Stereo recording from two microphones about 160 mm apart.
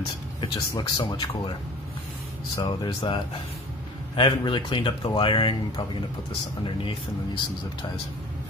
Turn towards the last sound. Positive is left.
turn(degrees=30)  # may be behind; listen again after turning